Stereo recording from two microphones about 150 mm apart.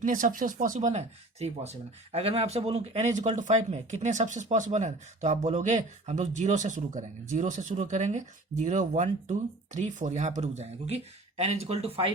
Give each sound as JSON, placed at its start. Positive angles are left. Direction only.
{"t": 0.0, "sound": "speech", "side_deg": -60}